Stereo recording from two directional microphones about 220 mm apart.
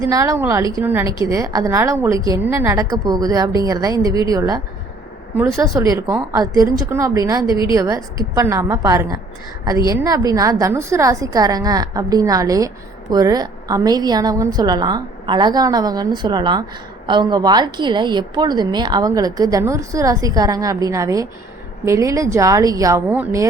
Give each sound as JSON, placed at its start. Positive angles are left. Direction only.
{"t": 0.0, "sound": "a woman's voice", "side_deg": -15}
{"t": 7.5, "sound": "a woman's voice", "side_deg": 20}
{"t": 7.8, "sound": "a woman's voice", "side_deg": -15}